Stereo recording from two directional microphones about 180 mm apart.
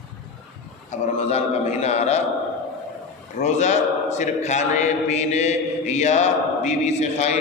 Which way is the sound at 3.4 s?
40° left (ahead or behind).